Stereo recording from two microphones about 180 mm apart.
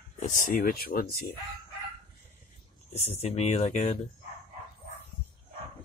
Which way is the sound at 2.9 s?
35° left (ahead or behind).